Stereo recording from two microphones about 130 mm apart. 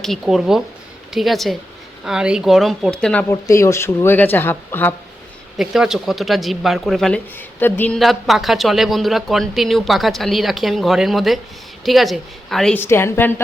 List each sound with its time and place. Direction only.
0.0 s speech: centre (ahead or behind)
3.2 s speech: 20° left (ahead or behind)
5.5 s speech: 5° right (ahead or behind)
7.3 s speech: 15° left (ahead or behind)
7.9 s speech: centre (ahead or behind)
12.7 s speech: 15° left (ahead or behind)